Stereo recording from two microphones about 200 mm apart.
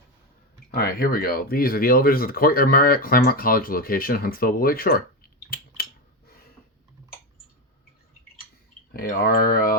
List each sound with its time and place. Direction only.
0.7 s speech: 50° left (ahead or behind)
8.9 s speech: 50° left (ahead or behind)